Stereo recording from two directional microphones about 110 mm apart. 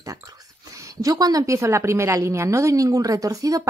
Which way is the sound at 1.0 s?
35° right (ahead or behind).